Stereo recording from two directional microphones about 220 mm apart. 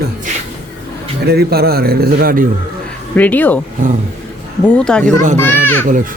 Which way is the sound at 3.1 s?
5° left (ahead or behind).